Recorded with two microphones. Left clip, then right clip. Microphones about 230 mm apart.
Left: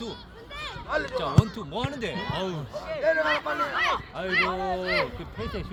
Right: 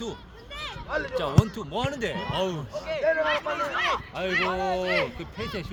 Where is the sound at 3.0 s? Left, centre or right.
Left.